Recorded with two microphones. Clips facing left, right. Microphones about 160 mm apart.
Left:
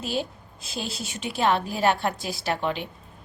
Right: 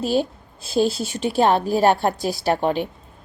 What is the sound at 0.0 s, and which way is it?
A woman's voice, 35° right (ahead or behind).